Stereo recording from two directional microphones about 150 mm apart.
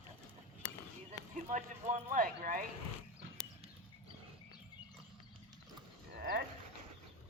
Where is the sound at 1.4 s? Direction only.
55° right (ahead or behind).